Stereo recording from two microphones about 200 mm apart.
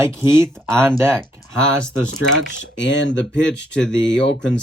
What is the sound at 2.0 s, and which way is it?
Speech, 70° left (ahead or behind).